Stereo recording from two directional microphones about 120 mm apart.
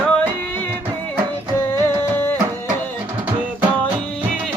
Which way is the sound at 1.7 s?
15° left (ahead or behind).